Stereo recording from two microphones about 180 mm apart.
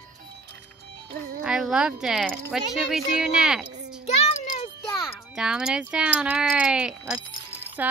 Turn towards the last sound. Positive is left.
turn(degrees=-10)  # may be behind; listen again after turning